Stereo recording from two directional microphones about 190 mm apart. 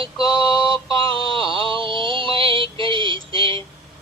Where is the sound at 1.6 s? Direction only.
25° right (ahead or behind).